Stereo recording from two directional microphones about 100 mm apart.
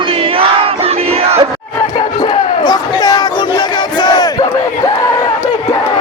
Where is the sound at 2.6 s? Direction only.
45° left (ahead or behind).